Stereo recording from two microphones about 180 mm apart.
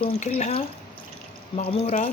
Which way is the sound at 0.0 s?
40° left (ahead or behind).